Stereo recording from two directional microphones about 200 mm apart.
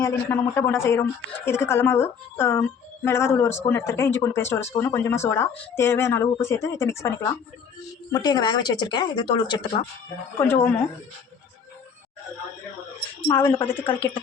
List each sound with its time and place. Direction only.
0.0 s speech: 10° left (ahead or behind)
10.4 s speech: 10° left (ahead or behind)
13.3 s speech: 10° left (ahead or behind)